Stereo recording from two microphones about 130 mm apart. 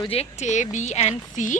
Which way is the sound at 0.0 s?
50° left (ahead or behind).